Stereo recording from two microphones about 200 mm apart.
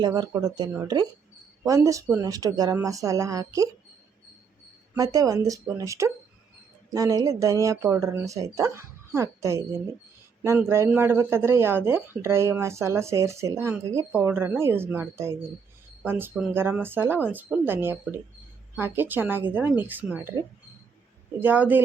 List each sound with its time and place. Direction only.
0.0 s speech: 20° right (ahead or behind)
4.9 s speech: 20° right (ahead or behind)
21.4 s speech: 10° right (ahead or behind)